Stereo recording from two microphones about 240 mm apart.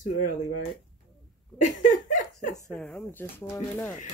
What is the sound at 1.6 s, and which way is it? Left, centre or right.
Laughter, left.